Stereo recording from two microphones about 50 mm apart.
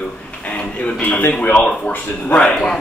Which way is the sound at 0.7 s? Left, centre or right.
Left.